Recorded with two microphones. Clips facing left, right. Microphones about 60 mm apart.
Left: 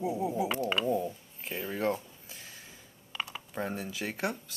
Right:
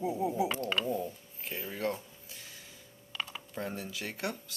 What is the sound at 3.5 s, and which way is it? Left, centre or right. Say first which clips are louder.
Speech: left 3 dB; left.